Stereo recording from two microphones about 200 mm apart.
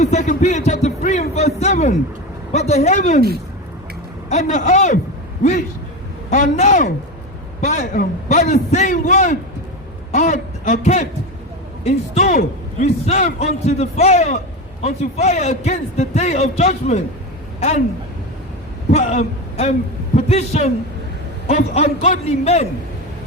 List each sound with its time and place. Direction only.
0.0 s a sound: 35° left (ahead or behind)
2.5 s a man's voice: 35° left (ahead or behind)
4.3 s a man's voice: 35° left (ahead or behind)
18.9 s a man's voice: 35° left (ahead or behind)